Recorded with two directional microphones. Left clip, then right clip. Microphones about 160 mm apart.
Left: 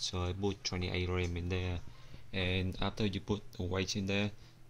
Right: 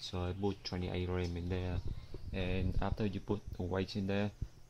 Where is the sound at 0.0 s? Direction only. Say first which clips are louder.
Left 2 dB; 10° right (ahead or behind).